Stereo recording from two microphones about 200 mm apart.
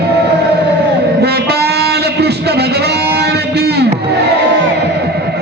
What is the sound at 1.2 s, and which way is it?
Music, 55° right (ahead or behind).